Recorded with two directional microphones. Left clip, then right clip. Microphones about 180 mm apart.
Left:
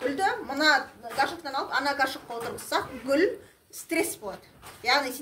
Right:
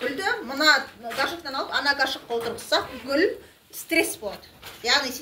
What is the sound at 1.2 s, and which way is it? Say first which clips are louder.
Speech: right 1 dB; 55° left (ahead or behind).